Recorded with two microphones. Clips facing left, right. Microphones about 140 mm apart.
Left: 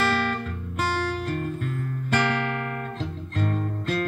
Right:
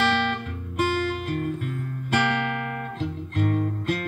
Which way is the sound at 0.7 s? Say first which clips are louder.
Right 2 dB; 40° left (ahead or behind).